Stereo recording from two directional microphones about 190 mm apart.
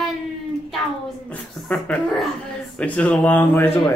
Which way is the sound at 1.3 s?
5° left (ahead or behind).